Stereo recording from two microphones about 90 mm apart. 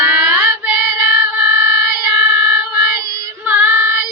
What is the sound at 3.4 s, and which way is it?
Female singing, 20° right (ahead or behind).